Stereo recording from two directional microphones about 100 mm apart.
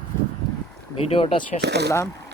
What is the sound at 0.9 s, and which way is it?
Speech, 70° left (ahead or behind).